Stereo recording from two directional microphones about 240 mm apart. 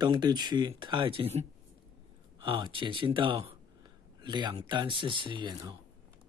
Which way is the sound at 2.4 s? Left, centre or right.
Right.